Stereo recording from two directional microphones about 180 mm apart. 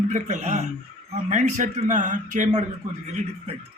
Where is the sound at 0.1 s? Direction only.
40° right (ahead or behind).